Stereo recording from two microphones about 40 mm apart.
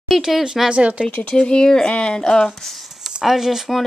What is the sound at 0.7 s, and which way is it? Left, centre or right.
Speech, right.